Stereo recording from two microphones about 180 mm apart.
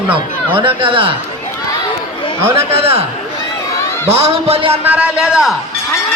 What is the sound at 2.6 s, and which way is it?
Speech, 35° right (ahead or behind).